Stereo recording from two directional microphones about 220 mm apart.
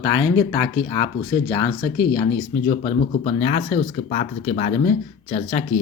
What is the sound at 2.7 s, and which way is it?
Speech, 30° left (ahead or behind).